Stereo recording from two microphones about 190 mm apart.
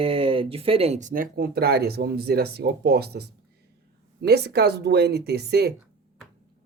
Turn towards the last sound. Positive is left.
turn(degrees=-60)  # may be behind; listen again after turning